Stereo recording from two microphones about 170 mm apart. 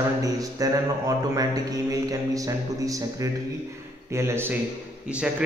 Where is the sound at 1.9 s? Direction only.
20° right (ahead or behind).